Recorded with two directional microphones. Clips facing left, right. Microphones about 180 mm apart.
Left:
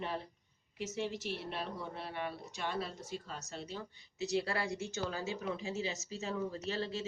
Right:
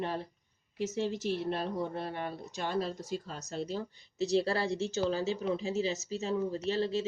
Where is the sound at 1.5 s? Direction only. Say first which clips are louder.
Right 8 dB; 40° right (ahead or behind).